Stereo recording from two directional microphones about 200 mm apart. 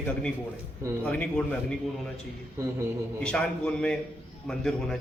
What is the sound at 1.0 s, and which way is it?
Speech, 5° left (ahead or behind).